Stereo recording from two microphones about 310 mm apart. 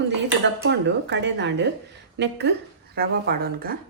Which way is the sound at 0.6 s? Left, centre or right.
Right.